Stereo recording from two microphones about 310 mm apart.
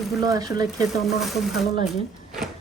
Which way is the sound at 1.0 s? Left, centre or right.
Centre.